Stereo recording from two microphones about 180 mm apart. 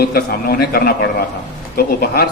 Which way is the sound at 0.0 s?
60° left (ahead or behind).